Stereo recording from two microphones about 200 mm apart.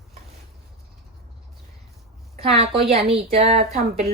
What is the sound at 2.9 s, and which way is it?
Speech, 30° right (ahead or behind).